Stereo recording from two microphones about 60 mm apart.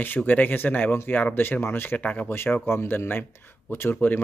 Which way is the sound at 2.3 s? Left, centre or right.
Left.